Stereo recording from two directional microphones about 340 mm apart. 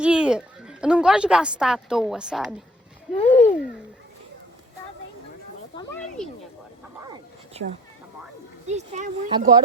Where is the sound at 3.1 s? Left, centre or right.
Centre.